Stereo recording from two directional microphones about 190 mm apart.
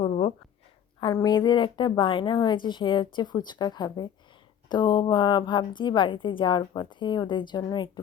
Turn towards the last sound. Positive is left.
turn(degrees=25)  # may be behind; listen again after turning